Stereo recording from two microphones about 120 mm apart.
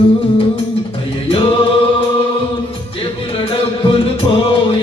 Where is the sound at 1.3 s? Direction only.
45° left (ahead or behind).